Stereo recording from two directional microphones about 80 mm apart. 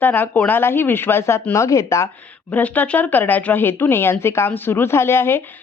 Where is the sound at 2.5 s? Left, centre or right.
Centre.